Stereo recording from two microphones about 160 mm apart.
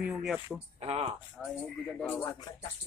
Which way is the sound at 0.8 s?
40° right (ahead or behind).